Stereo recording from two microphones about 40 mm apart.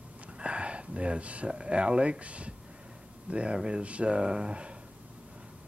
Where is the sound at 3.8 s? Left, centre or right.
Right.